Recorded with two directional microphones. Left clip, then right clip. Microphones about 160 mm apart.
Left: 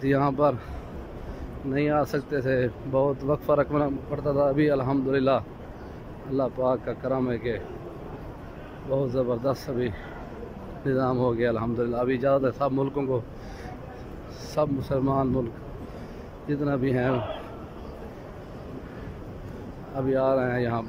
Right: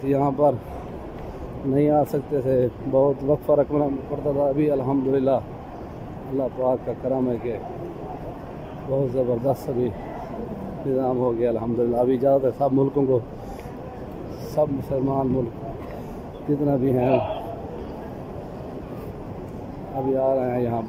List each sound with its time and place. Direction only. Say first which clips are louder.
0.0 s speech: right 3 dB; 15° right (ahead or behind)
1.7 s a man's voice: right 5 dB; 20° right (ahead or behind)
6.4 s speech: right 2 dB; 15° right (ahead or behind)
8.9 s a man's voice: right 3 dB; 15° right (ahead or behind)
14.5 s speech: right 3 dB; 15° right (ahead or behind)
16.6 s a man's voice: right 4 dB; 20° right (ahead or behind)
20.2 s speech: right 2 dB; 10° right (ahead or behind)